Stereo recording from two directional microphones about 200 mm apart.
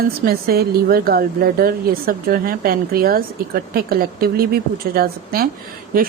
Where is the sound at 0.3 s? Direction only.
50° right (ahead or behind).